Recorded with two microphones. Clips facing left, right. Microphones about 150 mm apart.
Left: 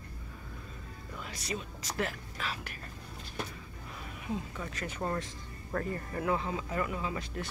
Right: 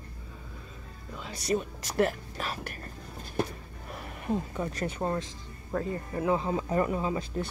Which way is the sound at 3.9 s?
60° right (ahead or behind).